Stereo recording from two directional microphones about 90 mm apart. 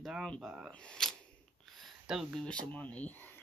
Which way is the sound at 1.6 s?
Centre (ahead or behind).